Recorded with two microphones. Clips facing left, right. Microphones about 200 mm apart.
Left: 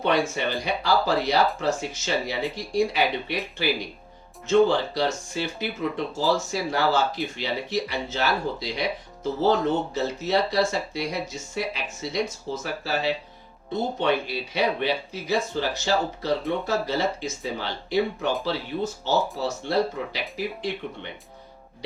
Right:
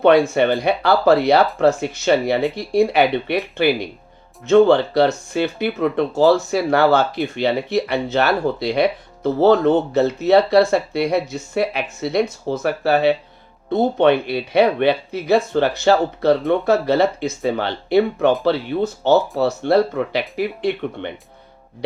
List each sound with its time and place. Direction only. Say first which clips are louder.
0.0 s speech: right 10 dB; 60° right (ahead or behind)